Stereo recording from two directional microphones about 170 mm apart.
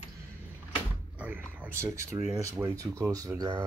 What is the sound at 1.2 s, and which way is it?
Speech, 10° right (ahead or behind).